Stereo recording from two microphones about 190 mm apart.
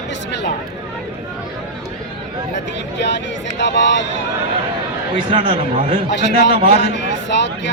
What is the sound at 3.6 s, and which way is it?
Speech, 70° left (ahead or behind).